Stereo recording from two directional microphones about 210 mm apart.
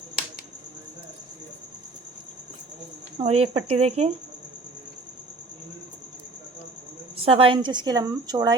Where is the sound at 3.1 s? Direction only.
30° right (ahead or behind).